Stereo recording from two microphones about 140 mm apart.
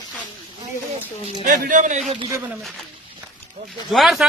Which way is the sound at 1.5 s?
70° right (ahead or behind).